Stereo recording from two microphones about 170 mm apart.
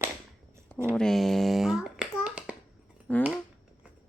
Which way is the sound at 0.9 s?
5° left (ahead or behind).